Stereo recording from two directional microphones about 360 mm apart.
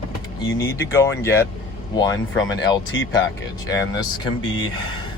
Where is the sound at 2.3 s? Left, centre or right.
Left.